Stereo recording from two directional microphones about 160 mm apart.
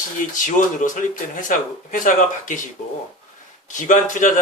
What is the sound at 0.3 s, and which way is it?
Speech, 55° left (ahead or behind).